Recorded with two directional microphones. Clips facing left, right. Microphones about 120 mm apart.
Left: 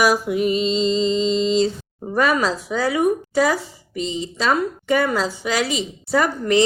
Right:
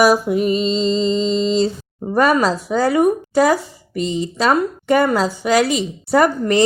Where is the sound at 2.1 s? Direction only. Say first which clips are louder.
Right 4 dB; 45° right (ahead or behind).